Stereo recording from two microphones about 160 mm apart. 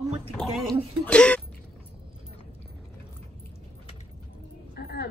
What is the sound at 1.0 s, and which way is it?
Speech, 10° left (ahead or behind).